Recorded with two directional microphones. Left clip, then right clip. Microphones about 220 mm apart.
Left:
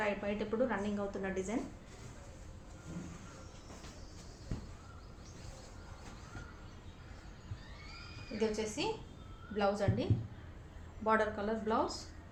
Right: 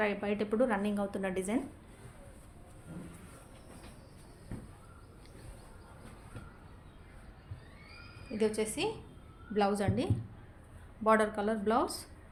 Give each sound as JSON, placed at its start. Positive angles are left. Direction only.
{"t": 0.0, "sound": "a woman's voice", "side_deg": -50}
{"t": 8.4, "sound": "a woman's voice", "side_deg": -45}